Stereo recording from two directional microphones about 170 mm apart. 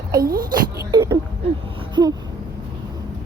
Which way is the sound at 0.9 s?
25° right (ahead or behind).